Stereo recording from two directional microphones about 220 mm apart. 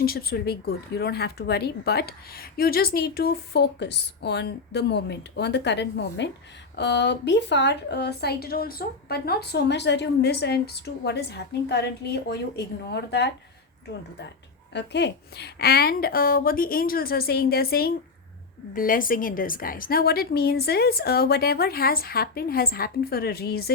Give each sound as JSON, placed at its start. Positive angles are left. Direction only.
{"t": 0.0, "sound": "a woman's voice", "side_deg": 45}
{"t": 14.7, "sound": "a woman's voice", "side_deg": 50}